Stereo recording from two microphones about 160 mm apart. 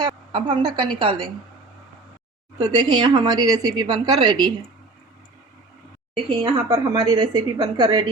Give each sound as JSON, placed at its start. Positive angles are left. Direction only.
{"t": 0.0, "sound": "a woman's voice", "side_deg": -30}
{"t": 2.6, "sound": "speech", "side_deg": -25}
{"t": 6.4, "sound": "speech", "side_deg": -25}